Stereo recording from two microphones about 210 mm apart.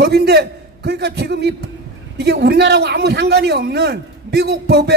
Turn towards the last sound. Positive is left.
turn(degrees=-50)  # may be behind; listen again after turning